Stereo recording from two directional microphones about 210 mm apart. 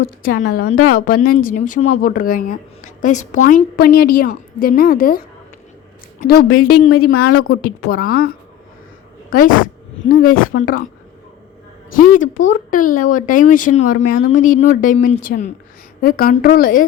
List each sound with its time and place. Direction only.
0.0 s a woman's voice: 45° left (ahead or behind)
6.7 s a woman's voice: 90° left
7.0 s a woman's voice: 45° left (ahead or behind)
7.3 s a woman's voice: 90° left
7.6 s a woman's voice: 45° left (ahead or behind)
9.3 s speech: 40° left (ahead or behind)
10.6 s a woman's voice: 45° left (ahead or behind)
11.9 s a woman's voice: 40° left (ahead or behind)